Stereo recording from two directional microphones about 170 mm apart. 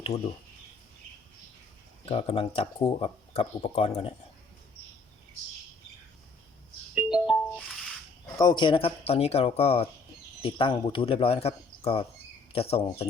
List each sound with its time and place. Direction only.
0.1 s speech: 35° left (ahead or behind)
2.0 s speech: 35° left (ahead or behind)
6.9 s music: 5° right (ahead or behind)
8.4 s speech: 25° left (ahead or behind)